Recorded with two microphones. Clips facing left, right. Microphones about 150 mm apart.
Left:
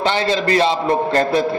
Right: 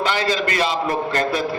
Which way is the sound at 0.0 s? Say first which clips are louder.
Left 3 dB; 25° left (ahead or behind).